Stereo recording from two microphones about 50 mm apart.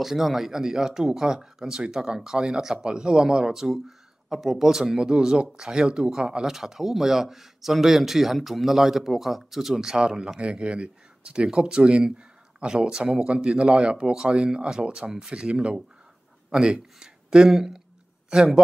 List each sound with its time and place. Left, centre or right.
0.0 s speech: centre
9.9 s speech: centre
17.5 s speech: centre